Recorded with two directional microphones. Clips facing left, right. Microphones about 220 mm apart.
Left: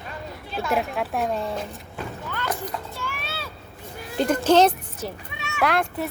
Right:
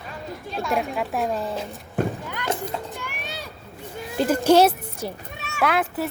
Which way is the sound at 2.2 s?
15° right (ahead or behind).